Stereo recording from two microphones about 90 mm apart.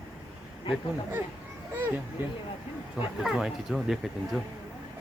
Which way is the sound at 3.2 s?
5° right (ahead or behind).